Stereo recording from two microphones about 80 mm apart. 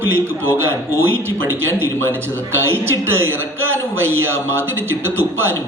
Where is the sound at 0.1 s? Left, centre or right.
Right.